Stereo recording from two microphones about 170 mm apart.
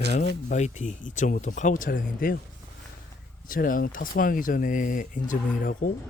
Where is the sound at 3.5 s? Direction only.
55° left (ahead or behind).